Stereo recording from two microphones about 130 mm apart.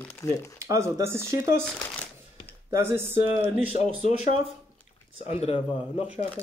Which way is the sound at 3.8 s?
60° left (ahead or behind).